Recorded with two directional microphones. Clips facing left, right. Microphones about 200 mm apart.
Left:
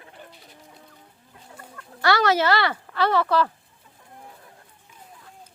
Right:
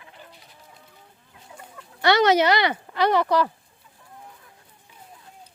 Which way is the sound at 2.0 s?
20° right (ahead or behind).